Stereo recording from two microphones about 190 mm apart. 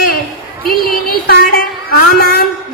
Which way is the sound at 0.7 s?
50° left (ahead or behind).